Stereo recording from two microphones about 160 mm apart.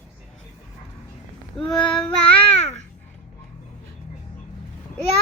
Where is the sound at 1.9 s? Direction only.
5° left (ahead or behind).